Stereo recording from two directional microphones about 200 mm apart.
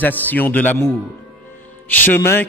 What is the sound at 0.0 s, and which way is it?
A man's voice, 10° left (ahead or behind).